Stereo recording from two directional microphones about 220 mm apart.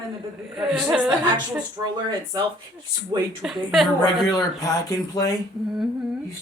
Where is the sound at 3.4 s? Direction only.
Centre (ahead or behind).